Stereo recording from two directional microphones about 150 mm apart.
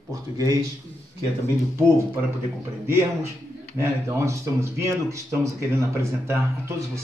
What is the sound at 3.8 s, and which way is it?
Speech, 20° right (ahead or behind).